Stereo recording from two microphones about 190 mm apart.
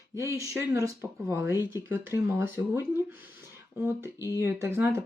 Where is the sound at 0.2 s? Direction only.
15° right (ahead or behind).